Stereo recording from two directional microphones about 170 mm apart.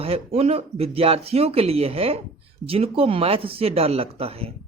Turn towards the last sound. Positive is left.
turn(degrees=-35)  # may be behind; listen again after turning